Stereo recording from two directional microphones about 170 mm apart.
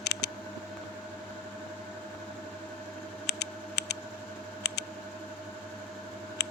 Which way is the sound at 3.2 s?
75° left (ahead or behind).